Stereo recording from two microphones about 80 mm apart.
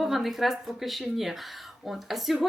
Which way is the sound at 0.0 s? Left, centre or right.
Centre.